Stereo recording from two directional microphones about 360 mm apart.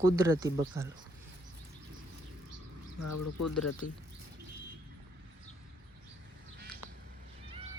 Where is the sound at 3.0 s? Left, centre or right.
Left.